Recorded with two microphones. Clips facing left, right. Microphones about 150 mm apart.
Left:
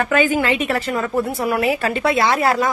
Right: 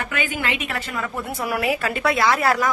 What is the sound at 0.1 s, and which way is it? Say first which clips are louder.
A woman's voice: left 9 dB; 35° left (ahead or behind).